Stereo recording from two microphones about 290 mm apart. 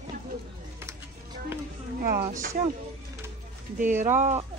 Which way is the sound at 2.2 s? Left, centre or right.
Right.